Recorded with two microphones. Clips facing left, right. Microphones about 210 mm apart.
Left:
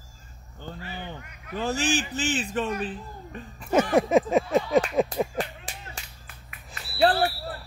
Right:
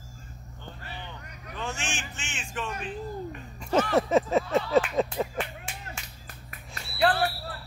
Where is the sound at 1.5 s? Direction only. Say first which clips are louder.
Left 9 dB; 35° left (ahead or behind).